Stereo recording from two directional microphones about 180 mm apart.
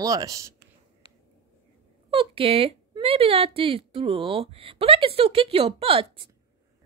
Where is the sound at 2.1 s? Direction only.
30° right (ahead or behind).